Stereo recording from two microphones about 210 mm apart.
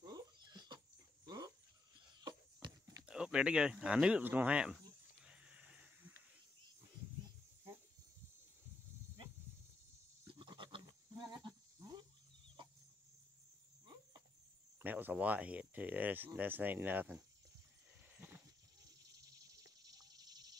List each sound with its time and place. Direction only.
0.0 s dog: 20° right (ahead or behind)
2.2 s horse: 20° right (ahead or behind)
3.0 s speech: 5° right (ahead or behind)
5.2 s a sound: 5° right (ahead or behind)
10.2 s goat: 20° right (ahead or behind)
14.8 s a sound: 10° right (ahead or behind)
16.3 s speech: 10° right (ahead or behind)
18.1 s goat: 10° right (ahead or behind)
19.1 s a sound: 15° right (ahead or behind)